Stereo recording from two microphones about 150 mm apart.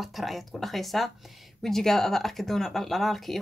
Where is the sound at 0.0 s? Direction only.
Centre (ahead or behind).